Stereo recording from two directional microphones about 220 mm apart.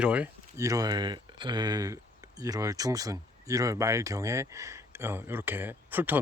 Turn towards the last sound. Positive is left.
turn(degrees=-10)  # may be behind; listen again after turning